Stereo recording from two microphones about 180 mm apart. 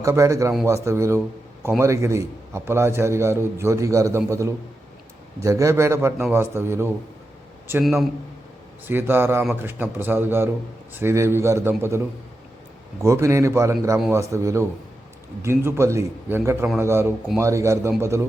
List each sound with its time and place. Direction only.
0.0 s a man's voice: 15° right (ahead or behind)
7.7 s a man's voice: 5° right (ahead or behind)